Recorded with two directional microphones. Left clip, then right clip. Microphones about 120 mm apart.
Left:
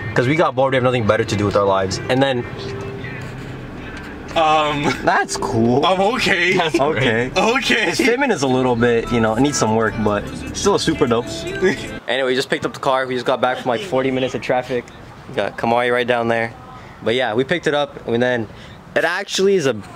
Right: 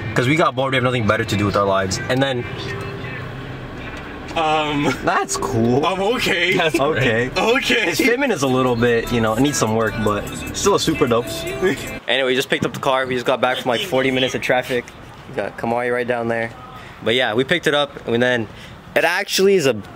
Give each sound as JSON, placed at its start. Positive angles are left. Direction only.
{"t": 0.1, "sound": "speech", "side_deg": -5}
{"t": 4.4, "sound": "speech", "side_deg": 40}
{"t": 5.0, "sound": "speech", "side_deg": 0}
{"t": 5.9, "sound": "speech", "side_deg": 30}
{"t": 6.8, "sound": "speech", "side_deg": 5}
{"t": 7.3, "sound": "speech", "side_deg": 30}
{"t": 8.2, "sound": "speech", "side_deg": 0}
{"t": 9.8, "sound": "speech", "side_deg": 15}
{"t": 10.1, "sound": "speech", "side_deg": 0}
{"t": 15.3, "sound": "speech", "side_deg": 30}
{"t": 17.0, "sound": "speech", "side_deg": 0}